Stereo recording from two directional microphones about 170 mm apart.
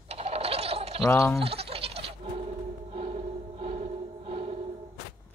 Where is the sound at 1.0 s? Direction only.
15° left (ahead or behind).